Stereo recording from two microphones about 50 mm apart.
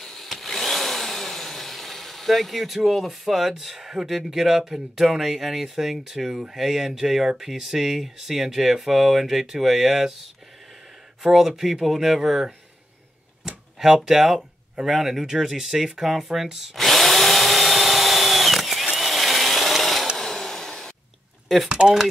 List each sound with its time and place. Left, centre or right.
0.0 s a sound: centre
11.2 s speech: centre
13.7 s speech: centre
16.7 s drill: centre
20.2 s a sound: centre
21.6 s speech: centre